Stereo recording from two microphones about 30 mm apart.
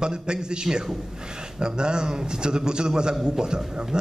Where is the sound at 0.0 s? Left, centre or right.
Right.